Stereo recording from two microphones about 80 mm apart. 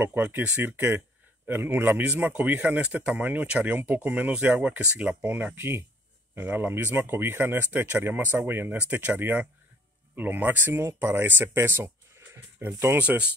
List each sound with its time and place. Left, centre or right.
0.0 s speech: right
5.2 s speech: right
12.6 s speech: right
12.9 s speech: centre